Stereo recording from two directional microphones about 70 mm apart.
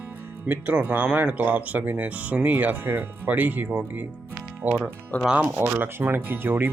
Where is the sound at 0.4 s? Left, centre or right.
Right.